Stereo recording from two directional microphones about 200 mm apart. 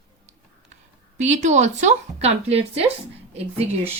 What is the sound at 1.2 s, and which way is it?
Speech, 35° right (ahead or behind).